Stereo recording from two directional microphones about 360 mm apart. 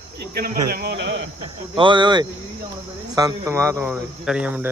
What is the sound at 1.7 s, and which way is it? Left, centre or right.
A man's voice, centre.